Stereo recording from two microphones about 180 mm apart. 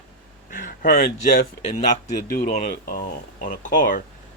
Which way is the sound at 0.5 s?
45° left (ahead or behind).